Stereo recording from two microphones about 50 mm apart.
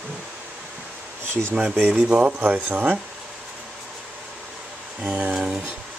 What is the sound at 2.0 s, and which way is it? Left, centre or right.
Speech, right.